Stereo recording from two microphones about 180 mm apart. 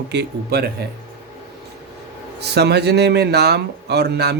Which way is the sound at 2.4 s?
65° right (ahead or behind).